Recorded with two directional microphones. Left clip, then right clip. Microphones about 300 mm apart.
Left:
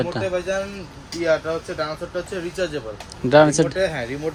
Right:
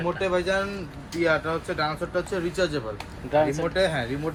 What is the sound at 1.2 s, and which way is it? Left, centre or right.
Speech, centre.